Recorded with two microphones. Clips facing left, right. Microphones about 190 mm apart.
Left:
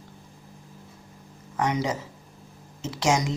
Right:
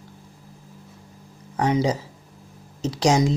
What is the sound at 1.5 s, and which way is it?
Speech, 30° right (ahead or behind).